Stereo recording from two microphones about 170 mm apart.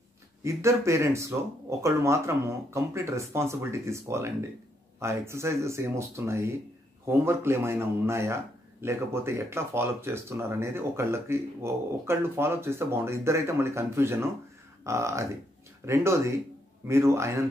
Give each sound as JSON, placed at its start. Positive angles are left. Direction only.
{"t": 0.4, "sound": "speech", "side_deg": -15}